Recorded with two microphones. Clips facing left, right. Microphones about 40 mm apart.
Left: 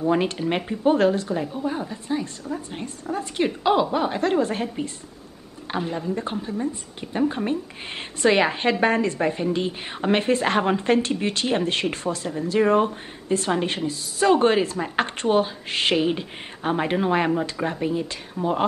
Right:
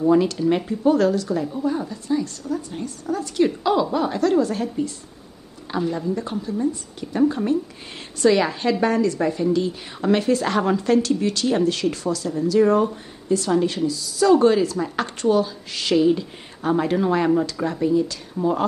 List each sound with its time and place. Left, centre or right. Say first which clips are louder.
0.1 s a woman's voice: right 5 dB; left